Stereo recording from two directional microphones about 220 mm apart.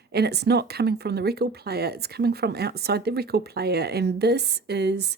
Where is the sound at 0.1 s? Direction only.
50° right (ahead or behind).